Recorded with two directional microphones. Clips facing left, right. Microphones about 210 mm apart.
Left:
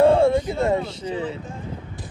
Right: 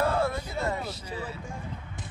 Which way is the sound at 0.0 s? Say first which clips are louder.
Left 11 dB; 25° left (ahead or behind).